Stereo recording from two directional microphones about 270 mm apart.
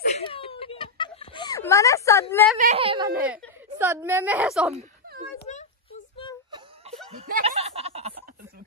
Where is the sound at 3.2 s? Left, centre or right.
Centre.